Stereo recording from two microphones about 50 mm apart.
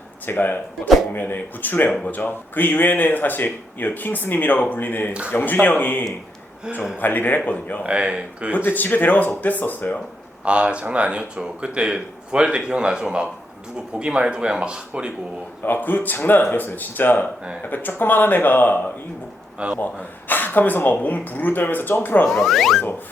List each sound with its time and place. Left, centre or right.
0.3 s speech: left
7.9 s speech: right
8.5 s speech: left
10.4 s speech: right
15.6 s speech: left
19.5 s speech: right
19.8 s speech: left
22.3 s speech: centre